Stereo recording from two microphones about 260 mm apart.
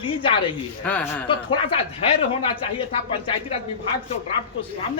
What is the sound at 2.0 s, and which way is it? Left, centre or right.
Speech, left.